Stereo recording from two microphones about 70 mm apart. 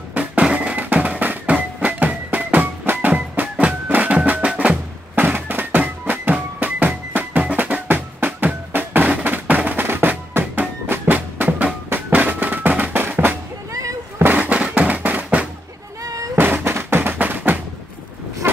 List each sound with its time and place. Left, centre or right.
0.1 s music: centre
5.1 s music: right
13.7 s a sound: right
14.1 s fireworks: right
16.0 s a sound: right
16.3 s music: right